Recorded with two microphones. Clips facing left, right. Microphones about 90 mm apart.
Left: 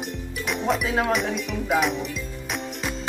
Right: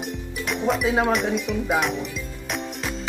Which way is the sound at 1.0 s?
Centre (ahead or behind).